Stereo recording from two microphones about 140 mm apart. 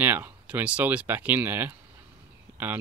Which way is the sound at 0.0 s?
15° right (ahead or behind).